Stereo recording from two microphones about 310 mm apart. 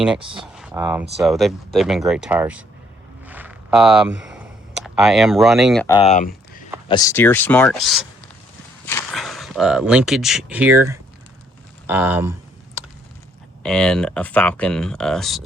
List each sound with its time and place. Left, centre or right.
0.3 s speech: centre
3.2 s a sound: centre
5.9 s speech: centre
6.8 s speech: centre
11.9 s a sound: centre
13.6 s speech: centre